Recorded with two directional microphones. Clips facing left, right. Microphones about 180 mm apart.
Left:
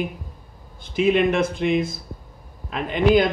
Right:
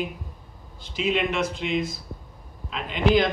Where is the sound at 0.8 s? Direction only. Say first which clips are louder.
Left 6 dB; 55° left (ahead or behind).